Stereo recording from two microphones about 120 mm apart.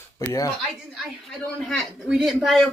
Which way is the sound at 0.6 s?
5° left (ahead or behind).